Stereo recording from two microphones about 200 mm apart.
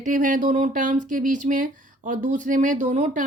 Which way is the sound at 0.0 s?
40° right (ahead or behind).